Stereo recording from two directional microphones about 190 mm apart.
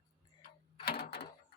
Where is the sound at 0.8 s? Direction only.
50° left (ahead or behind).